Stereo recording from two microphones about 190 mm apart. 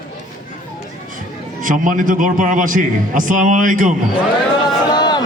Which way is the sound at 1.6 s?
45° right (ahead or behind).